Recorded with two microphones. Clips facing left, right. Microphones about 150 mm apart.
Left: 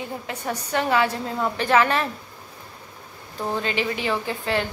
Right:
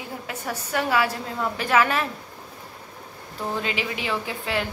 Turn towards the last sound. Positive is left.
turn(degrees=-5)  # may be behind; listen again after turning